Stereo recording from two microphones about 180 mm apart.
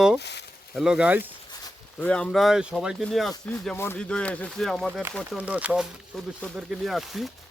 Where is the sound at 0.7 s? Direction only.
Centre (ahead or behind).